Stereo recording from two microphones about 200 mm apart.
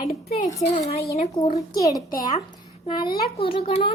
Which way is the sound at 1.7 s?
15° left (ahead or behind).